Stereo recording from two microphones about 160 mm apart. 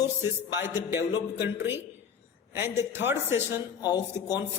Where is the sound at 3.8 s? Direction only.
25° left (ahead or behind).